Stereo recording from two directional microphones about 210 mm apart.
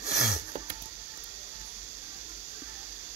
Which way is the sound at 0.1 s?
45° left (ahead or behind).